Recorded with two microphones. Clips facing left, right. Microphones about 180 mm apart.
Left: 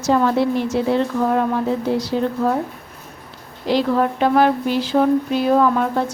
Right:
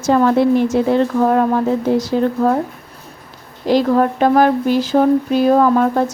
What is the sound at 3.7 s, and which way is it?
A woman's voice, 45° right (ahead or behind).